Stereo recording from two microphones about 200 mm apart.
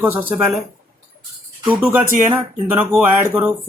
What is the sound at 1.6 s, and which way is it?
Speech, 5° right (ahead or behind).